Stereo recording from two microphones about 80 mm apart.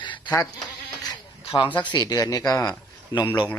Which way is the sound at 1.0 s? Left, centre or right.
Left.